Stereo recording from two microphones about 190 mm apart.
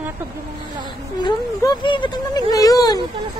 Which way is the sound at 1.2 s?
25° left (ahead or behind).